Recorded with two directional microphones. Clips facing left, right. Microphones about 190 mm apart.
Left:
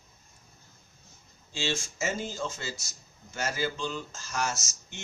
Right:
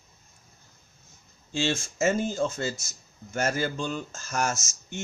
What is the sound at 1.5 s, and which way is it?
Speech, 50° right (ahead or behind).